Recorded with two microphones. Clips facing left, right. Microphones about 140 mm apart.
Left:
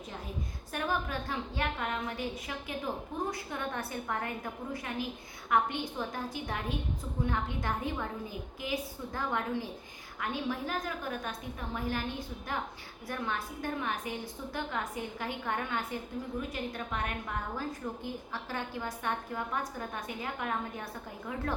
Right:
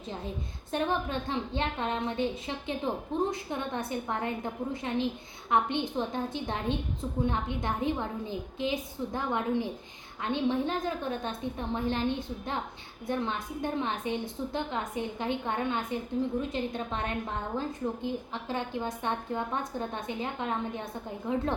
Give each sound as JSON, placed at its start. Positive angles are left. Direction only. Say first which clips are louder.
{"t": 0.7, "sound": "a woman's voice", "louder": "right 4 dB", "side_deg": -25}